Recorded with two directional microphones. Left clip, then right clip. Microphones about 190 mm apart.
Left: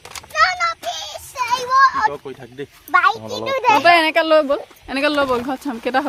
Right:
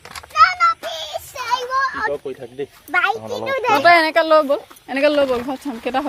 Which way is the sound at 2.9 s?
15° left (ahead or behind).